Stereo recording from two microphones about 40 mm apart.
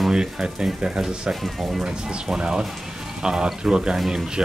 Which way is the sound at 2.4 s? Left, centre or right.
Centre.